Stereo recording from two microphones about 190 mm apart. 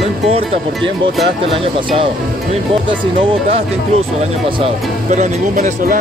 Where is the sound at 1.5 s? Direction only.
30° right (ahead or behind).